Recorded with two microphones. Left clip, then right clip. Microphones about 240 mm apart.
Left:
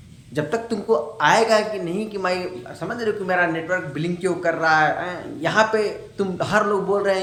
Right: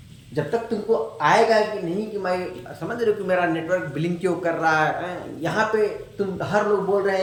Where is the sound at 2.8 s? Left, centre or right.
Centre.